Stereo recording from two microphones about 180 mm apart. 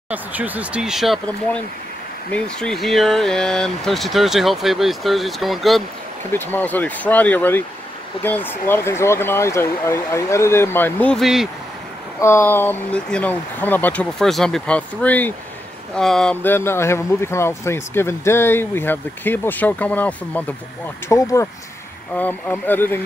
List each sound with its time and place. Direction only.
0.1 s speech: 10° right (ahead or behind)
6.3 s speech: 10° left (ahead or behind)
12.2 s speech: 15° left (ahead or behind)